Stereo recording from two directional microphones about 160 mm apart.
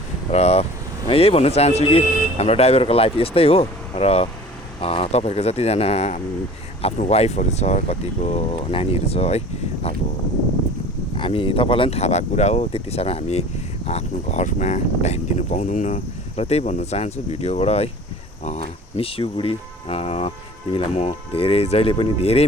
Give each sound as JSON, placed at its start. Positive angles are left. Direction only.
{"t": 0.3, "sound": "speech", "side_deg": 40}
{"t": 11.2, "sound": "speech", "side_deg": 35}